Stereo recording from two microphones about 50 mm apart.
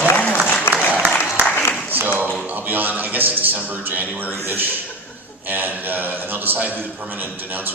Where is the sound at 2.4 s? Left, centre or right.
Right.